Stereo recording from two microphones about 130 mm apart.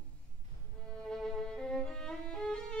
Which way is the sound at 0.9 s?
5° left (ahead or behind).